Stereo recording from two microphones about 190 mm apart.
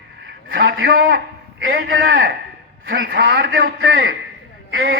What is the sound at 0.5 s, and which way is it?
Speech, 75° right (ahead or behind).